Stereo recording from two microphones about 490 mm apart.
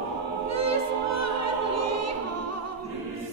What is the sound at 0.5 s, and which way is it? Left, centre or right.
Music, right.